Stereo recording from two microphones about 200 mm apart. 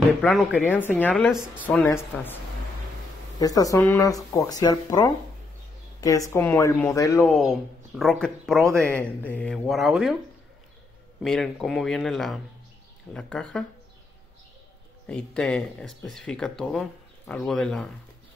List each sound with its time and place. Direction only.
0.2 s speech: centre (ahead or behind)
1.9 s speech: 10° left (ahead or behind)
3.3 s speech: 15° left (ahead or behind)
7.2 s speech: centre (ahead or behind)
11.2 s speech: centre (ahead or behind)
15.0 s speech: 5° left (ahead or behind)